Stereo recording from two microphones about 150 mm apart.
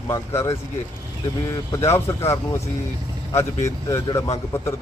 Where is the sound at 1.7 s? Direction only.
20° left (ahead or behind).